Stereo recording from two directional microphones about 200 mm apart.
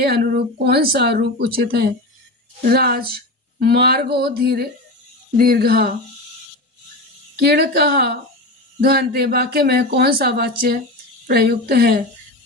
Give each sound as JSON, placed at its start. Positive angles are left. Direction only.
{"t": 0.0, "sound": "speech", "side_deg": -50}
{"t": 7.3, "sound": "speech", "side_deg": -55}